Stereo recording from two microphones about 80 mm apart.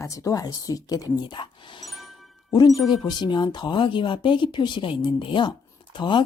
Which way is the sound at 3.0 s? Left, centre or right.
Left.